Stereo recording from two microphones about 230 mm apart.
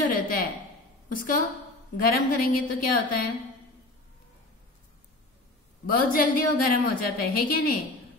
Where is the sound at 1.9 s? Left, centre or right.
Left.